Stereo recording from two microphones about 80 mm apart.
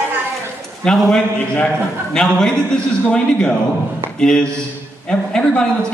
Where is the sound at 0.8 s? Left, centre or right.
Centre.